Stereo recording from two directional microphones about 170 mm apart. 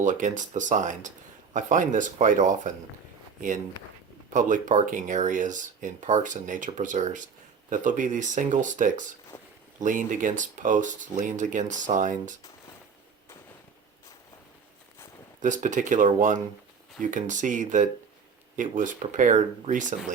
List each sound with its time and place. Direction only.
0.0 s speech: 50° right (ahead or behind)
4.4 s speech: 50° right (ahead or behind)
9.3 s a sound: 15° left (ahead or behind)
9.8 s speech: 50° right (ahead or behind)
15.4 s speech: 50° right (ahead or behind)